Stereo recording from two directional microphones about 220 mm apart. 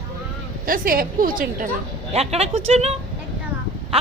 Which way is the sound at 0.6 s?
40° right (ahead or behind).